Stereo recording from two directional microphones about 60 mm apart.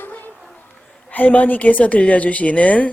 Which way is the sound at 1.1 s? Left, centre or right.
Left.